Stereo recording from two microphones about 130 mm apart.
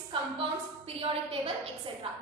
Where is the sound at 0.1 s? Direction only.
45° right (ahead or behind).